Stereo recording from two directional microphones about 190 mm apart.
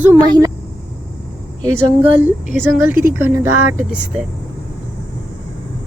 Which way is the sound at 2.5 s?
10° right (ahead or behind).